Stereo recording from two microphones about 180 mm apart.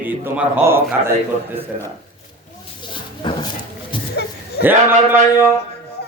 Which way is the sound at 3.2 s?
25° left (ahead or behind).